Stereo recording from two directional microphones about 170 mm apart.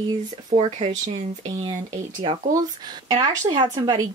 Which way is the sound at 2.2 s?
30° right (ahead or behind).